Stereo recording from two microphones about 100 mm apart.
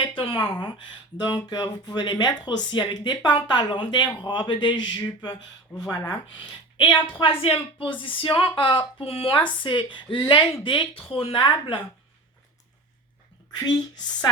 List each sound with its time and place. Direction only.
0.3 s speech: 20° left (ahead or behind)
1.2 s speech: 45° left (ahead or behind)
7.2 s a woman's voice: 60° left (ahead or behind)
9.0 s a woman's voice: 70° left (ahead or behind); by 11.8 s 55° left (ahead or behind)